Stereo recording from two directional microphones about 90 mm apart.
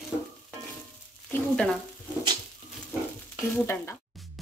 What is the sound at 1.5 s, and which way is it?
Speech, 15° left (ahead or behind).